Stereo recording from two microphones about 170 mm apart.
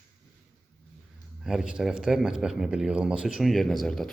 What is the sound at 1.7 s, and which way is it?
A man's voice, 5° right (ahead or behind).